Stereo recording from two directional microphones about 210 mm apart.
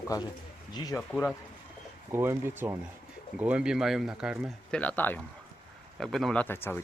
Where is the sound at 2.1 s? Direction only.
10° right (ahead or behind); by 6.8 s 10° left (ahead or behind).